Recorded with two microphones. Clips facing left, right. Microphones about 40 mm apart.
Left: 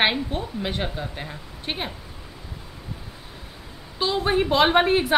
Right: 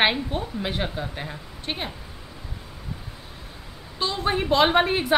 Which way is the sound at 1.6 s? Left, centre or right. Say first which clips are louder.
Left 1 dB; centre.